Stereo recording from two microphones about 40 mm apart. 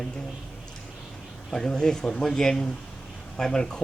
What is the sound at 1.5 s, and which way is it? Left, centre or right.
Speech, centre.